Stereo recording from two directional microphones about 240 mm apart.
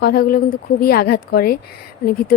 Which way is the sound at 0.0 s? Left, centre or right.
Left.